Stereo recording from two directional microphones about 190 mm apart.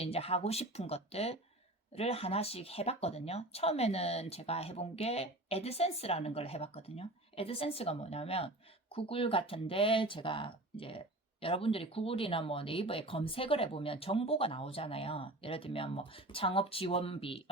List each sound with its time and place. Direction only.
0.0 s speech: 30° left (ahead or behind)